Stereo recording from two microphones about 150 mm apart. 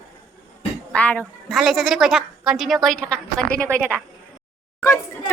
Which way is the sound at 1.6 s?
Centre (ahead or behind).